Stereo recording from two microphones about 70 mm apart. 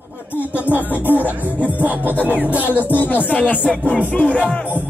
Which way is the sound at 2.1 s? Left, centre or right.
Left.